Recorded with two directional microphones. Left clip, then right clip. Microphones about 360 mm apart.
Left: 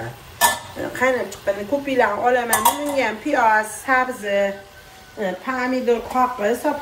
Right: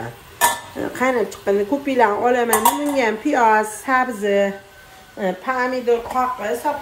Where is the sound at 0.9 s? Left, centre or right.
Centre.